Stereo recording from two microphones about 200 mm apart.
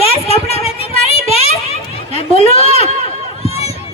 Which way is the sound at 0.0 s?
30° left (ahead or behind).